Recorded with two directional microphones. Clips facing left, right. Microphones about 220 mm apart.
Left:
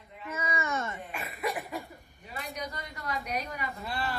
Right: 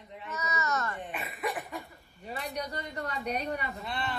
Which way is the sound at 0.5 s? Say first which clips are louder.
Right 1 dB; 25° left (ahead or behind).